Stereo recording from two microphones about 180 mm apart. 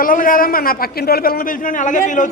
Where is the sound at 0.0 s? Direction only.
50° left (ahead or behind).